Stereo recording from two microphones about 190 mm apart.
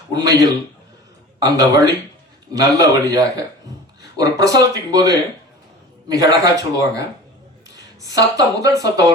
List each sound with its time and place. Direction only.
0.1 s a woman's voice: 20° right (ahead or behind)
8.0 s a woman's voice: 20° right (ahead or behind)